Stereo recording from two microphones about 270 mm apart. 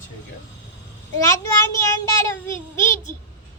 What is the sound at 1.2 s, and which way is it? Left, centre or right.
A child's voice, centre.